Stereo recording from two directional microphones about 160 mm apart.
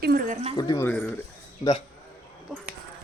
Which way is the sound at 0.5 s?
25° left (ahead or behind).